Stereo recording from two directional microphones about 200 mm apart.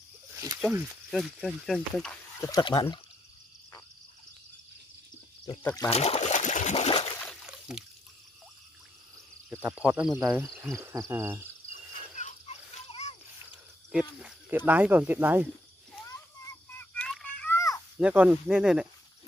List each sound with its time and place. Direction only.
0.3 s snake: 15° right (ahead or behind)
1.1 s speech: centre (ahead or behind)
2.4 s speech: 20° left (ahead or behind)
5.4 s speech: 20° left (ahead or behind)
5.8 s trickle: 30° left (ahead or behind)
7.2 s a sound: centre (ahead or behind)
9.6 s speech: 5° right (ahead or behind)
12.2 s a sound: 35° left (ahead or behind)
14.7 s speech: 10° right (ahead or behind)
16.7 s a sound: 5° left (ahead or behind)
17.9 s speech: 5° right (ahead or behind)